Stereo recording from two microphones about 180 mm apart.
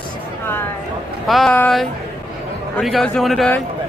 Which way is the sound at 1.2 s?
Centre (ahead or behind).